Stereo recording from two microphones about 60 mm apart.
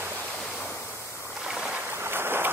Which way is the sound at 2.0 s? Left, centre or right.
Right.